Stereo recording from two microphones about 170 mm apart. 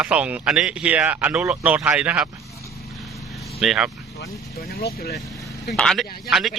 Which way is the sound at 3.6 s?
Centre (ahead or behind).